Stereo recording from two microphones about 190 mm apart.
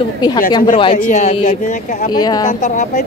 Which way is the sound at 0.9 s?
40° left (ahead or behind).